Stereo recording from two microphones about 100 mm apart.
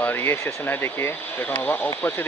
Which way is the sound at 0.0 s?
20° left (ahead or behind).